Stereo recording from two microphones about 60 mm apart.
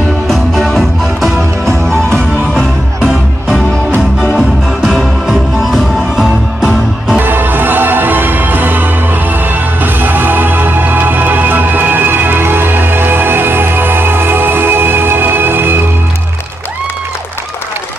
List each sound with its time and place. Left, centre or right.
0.3 s music: centre
1.9 s music: centre
4.2 s music: centre
7.2 s music: right